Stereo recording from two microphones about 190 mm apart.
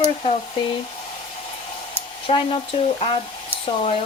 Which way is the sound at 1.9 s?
25° left (ahead or behind).